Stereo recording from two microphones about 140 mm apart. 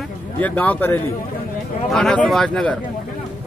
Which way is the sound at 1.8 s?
5° left (ahead or behind).